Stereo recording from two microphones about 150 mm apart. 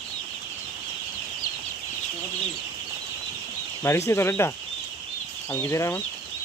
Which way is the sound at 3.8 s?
15° left (ahead or behind).